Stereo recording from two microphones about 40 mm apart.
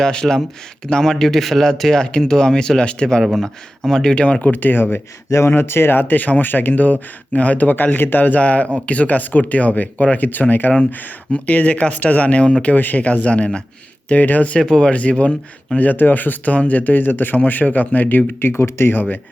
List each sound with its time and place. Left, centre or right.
0.0 s speech: centre
1.1 s a man's voice: centre
1.6 s speech: centre
4.4 s speech: left
10.7 s a man's voice: centre
11.3 s speech: left
12.7 s speech: left
14.1 s speech: left
14.8 s speech: left
15.9 s speech: left
18.3 s speech: left
18.9 s speech: left